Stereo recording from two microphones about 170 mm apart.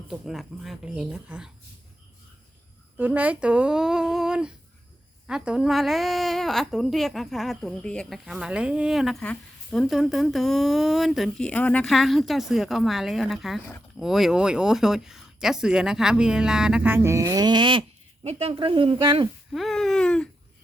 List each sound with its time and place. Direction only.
0.1 s a woman's voice: centre (ahead or behind)
3.0 s a woman's voice: 10° right (ahead or behind); by 19.3 s 25° right (ahead or behind)
19.5 s a woman's voice: centre (ahead or behind)